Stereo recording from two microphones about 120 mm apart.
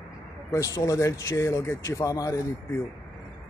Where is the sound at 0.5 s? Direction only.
25° left (ahead or behind).